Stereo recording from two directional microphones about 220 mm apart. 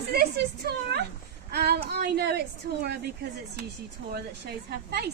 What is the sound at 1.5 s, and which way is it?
Child singing, 45° right (ahead or behind).